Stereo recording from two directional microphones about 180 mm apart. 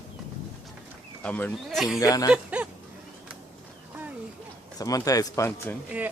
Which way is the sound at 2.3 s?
10° right (ahead or behind).